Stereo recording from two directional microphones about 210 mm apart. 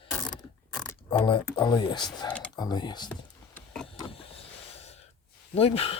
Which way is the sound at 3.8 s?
25° left (ahead or behind).